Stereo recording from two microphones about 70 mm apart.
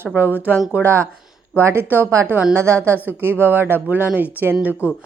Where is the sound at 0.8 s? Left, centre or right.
Right.